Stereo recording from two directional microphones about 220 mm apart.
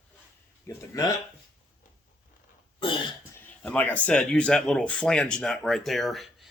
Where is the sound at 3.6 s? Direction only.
5° left (ahead or behind).